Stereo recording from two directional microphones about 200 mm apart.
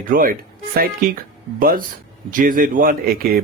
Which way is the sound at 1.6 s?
45° right (ahead or behind).